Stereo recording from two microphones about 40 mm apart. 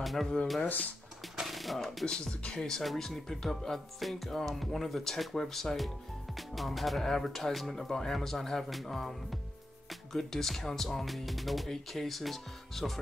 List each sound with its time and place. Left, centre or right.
0.0 s a sound: centre
2.0 s speech: centre
2.8 s speech: centre
8.6 s speech: centre